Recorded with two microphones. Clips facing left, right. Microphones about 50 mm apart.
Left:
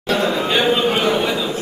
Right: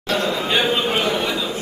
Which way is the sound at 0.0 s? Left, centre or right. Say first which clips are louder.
Left 3 dB; centre.